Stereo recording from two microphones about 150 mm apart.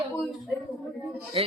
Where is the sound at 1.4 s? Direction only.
40° right (ahead or behind).